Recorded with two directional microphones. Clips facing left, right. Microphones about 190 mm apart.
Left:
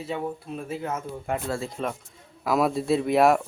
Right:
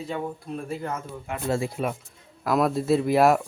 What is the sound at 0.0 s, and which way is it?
Speech, 5° left (ahead or behind).